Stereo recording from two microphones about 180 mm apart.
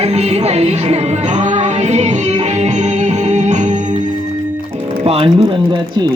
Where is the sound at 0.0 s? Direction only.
35° right (ahead or behind).